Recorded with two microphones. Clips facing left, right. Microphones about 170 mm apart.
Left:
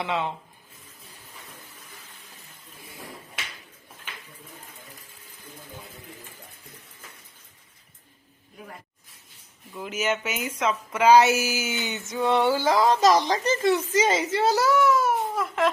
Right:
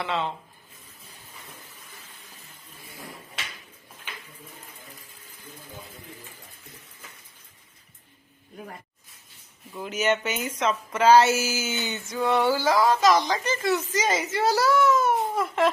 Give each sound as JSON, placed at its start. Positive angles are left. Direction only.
{"t": 0.0, "sound": "speech", "side_deg": 15}
{"t": 9.7, "sound": "speech", "side_deg": 0}
{"t": 13.0, "sound": "a woman's voice", "side_deg": 35}
{"t": 14.5, "sound": "speech", "side_deg": 15}